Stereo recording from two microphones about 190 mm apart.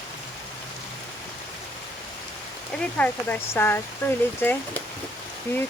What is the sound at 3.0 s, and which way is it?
Speech, 10° left (ahead or behind).